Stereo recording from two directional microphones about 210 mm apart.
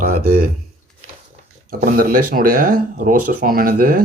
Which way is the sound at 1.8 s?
40° right (ahead or behind).